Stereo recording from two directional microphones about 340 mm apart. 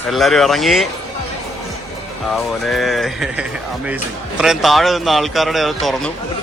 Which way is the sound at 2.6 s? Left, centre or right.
Centre.